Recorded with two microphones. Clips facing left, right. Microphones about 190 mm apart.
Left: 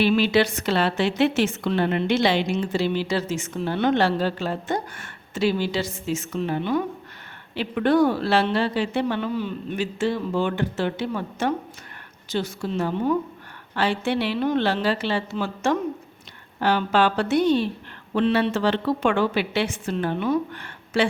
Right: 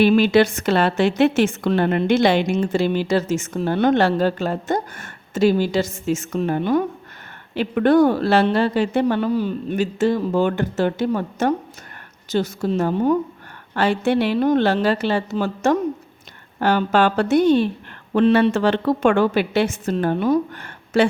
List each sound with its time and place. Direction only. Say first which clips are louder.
0.0 s a woman's voice: right 5 dB; 50° right (ahead or behind)